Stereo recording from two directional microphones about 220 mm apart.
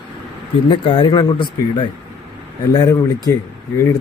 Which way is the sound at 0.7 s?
20° left (ahead or behind).